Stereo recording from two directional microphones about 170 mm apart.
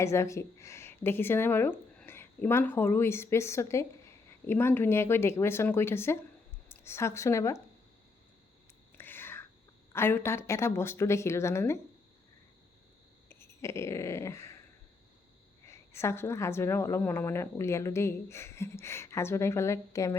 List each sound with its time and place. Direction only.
0.0 s a woman's voice: 15° left (ahead or behind)
9.0 s whispering: 10° left (ahead or behind)
9.9 s a woman's voice: 15° left (ahead or behind)
13.2 s dog: 15° left (ahead or behind)
15.6 s a woman's voice: 15° left (ahead or behind)